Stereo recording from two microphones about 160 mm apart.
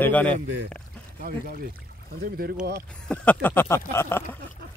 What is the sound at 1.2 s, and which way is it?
Speech, 65° right (ahead or behind).